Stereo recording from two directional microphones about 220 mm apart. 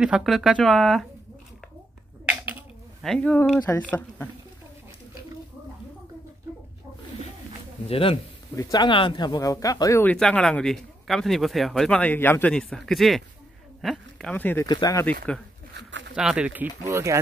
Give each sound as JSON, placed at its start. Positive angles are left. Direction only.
{"t": 0.0, "sound": "speech", "side_deg": 0}
{"t": 3.0, "sound": "speech", "side_deg": 5}
{"t": 7.8, "sound": "speech", "side_deg": 25}
{"t": 15.7, "sound": "a sound", "side_deg": -55}
{"t": 16.2, "sound": "speech", "side_deg": -5}